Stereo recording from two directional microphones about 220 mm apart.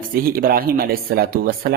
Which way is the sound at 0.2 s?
40° right (ahead or behind).